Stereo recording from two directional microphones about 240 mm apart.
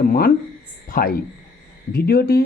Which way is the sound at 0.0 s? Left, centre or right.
Left.